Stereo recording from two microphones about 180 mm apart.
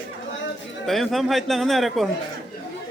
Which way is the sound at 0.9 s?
Centre (ahead or behind).